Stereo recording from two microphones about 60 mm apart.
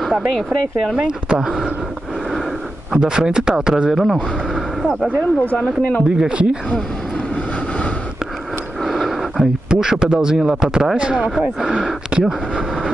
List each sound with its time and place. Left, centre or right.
0.9 s speech: centre
2.9 s speech: centre
5.6 s speech: left
6.1 s speech: centre
8.8 s speech: centre